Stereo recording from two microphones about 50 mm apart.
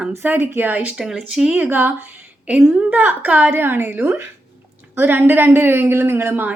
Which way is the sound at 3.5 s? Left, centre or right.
Right.